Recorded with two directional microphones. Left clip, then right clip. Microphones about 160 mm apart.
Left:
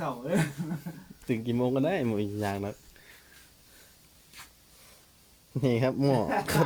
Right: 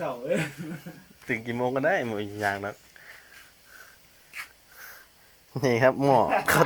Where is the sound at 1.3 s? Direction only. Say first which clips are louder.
Right 1 dB; 35° left (ahead or behind).